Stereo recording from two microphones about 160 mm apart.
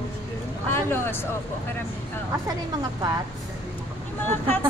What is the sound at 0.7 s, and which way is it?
Speech, 15° left (ahead or behind).